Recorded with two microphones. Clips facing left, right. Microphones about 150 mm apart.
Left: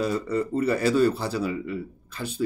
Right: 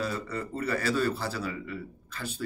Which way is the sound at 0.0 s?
15° left (ahead or behind).